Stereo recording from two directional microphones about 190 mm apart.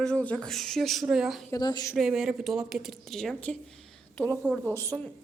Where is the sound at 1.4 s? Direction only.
20° left (ahead or behind).